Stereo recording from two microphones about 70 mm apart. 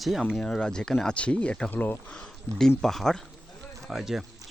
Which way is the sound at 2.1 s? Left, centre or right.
Centre.